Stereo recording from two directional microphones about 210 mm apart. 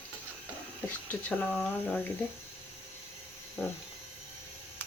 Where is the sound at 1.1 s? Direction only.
10° left (ahead or behind).